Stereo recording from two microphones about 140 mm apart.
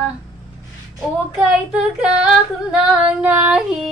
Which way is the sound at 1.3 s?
5° right (ahead or behind).